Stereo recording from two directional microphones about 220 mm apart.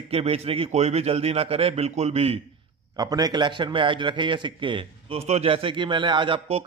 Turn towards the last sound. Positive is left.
turn(degrees=-25)  # may be behind; listen again after turning